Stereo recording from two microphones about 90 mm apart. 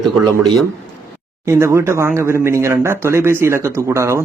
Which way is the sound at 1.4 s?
30° right (ahead or behind).